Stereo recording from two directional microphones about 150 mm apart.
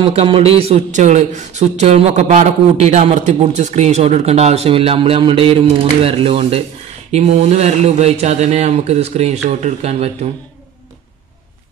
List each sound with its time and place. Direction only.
0.0 s a man's voice: 40° right (ahead or behind)